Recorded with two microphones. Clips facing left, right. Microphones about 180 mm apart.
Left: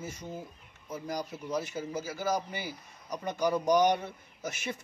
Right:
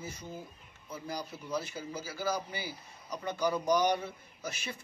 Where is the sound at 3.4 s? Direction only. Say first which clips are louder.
Left 3 dB; 20° left (ahead or behind).